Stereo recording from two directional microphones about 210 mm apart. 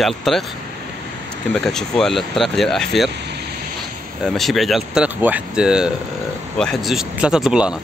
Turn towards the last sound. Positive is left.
turn(degrees=-5)  # may be behind; listen again after turning